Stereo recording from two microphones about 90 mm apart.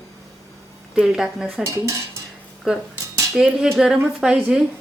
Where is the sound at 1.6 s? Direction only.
35° right (ahead or behind).